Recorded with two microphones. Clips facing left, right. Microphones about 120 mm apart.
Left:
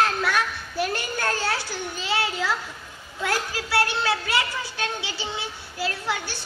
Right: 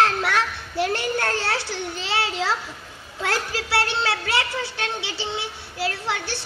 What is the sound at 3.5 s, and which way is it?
A child's voice, 25° right (ahead or behind).